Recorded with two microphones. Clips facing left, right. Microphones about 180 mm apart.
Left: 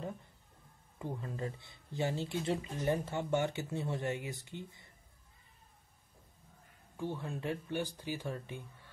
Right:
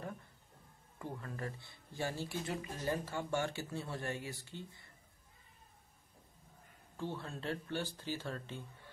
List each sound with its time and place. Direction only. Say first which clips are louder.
0.9 s speech: left 3 dB; 20° left (ahead or behind)
7.0 s speech: left 3 dB; 15° left (ahead or behind)